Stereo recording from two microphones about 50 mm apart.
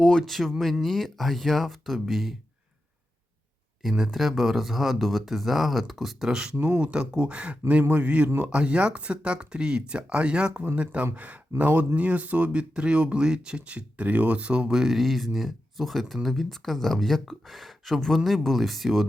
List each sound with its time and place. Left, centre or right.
0.0 s speech: centre
0.3 s speech: centre
3.8 s speech: centre
6.6 s speech: right
6.8 s speech: centre
14.7 s speech: centre